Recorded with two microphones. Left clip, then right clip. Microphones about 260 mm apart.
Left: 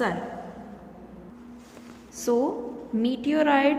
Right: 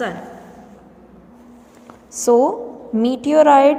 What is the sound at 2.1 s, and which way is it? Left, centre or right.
A woman's voice, centre.